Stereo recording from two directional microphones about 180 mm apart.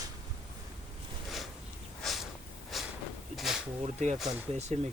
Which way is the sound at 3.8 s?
40° right (ahead or behind).